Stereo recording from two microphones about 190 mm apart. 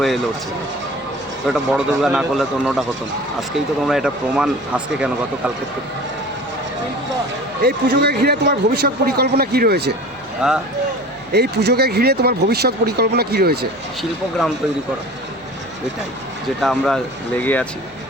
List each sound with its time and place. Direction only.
1.5 s speech: centre (ahead or behind)
3.8 s speech: 5° right (ahead or behind)
7.6 s speech: 55° right (ahead or behind)
10.4 s speech: 5° right (ahead or behind)
11.3 s speech: 60° right (ahead or behind)
16.6 s speech: centre (ahead or behind)